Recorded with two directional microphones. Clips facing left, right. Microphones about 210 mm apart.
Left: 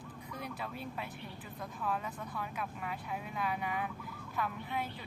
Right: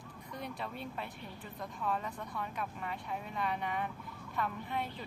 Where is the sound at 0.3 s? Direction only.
Centre (ahead or behind).